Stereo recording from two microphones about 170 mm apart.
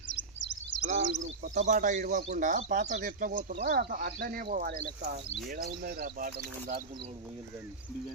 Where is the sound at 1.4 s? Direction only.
45° right (ahead or behind).